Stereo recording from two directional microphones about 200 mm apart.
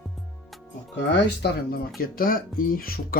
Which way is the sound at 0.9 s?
60° left (ahead or behind).